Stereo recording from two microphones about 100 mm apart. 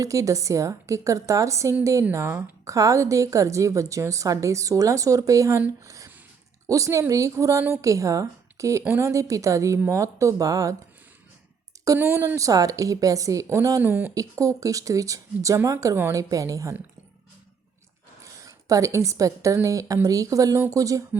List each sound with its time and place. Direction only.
0.0 s a woman's voice: 35° right (ahead or behind)
6.7 s a woman's voice: 30° right (ahead or behind)
11.9 s a woman's voice: 25° right (ahead or behind)
13.8 s speech: 20° right (ahead or behind)
14.1 s a woman's voice: 35° right (ahead or behind)
18.2 s a woman's voice: 35° right (ahead or behind)